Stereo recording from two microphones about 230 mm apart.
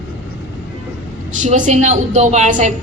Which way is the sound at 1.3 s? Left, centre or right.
Right.